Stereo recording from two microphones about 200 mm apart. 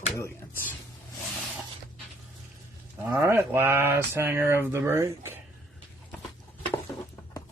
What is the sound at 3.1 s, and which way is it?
Speech, 10° right (ahead or behind).